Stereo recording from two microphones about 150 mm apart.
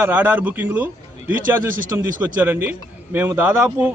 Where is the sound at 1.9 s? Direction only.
15° right (ahead or behind).